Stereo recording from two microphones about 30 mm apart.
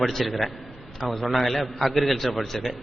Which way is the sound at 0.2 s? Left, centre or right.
Centre.